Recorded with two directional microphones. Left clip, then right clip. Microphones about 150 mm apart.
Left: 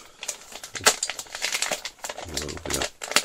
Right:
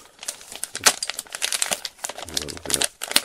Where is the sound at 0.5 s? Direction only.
40° right (ahead or behind).